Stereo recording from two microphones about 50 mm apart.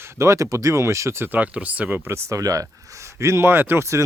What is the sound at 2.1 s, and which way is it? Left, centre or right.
Speech, right.